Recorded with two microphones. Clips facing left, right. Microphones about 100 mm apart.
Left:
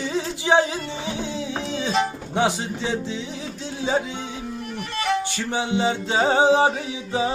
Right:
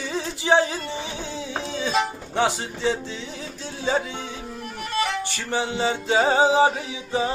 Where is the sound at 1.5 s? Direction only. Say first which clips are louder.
Right 1 dB; 15° right (ahead or behind).